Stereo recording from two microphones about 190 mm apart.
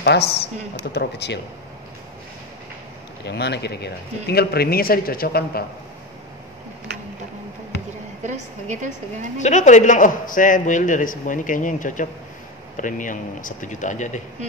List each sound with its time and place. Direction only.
0.0 s speech: 60° left (ahead or behind)
3.3 s speech: 60° left (ahead or behind)
8.2 s a woman's voice: 40° right (ahead or behind)
9.4 s a man's voice: 40° left (ahead or behind)